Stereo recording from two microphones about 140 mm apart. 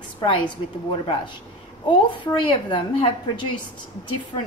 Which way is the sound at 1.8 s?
35° left (ahead or behind).